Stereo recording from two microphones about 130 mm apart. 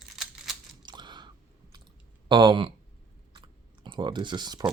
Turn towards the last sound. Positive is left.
turn(degrees=-35)  # may be behind; listen again after turning